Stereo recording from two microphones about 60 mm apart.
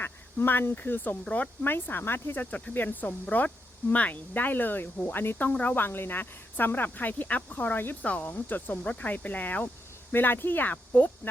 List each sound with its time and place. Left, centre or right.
0.0 s speech: left
1.6 s speech: left